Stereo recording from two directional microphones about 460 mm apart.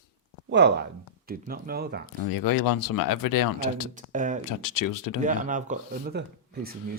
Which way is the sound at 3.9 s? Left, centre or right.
Centre.